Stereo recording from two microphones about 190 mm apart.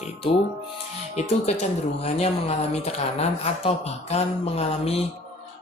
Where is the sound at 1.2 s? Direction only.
35° left (ahead or behind).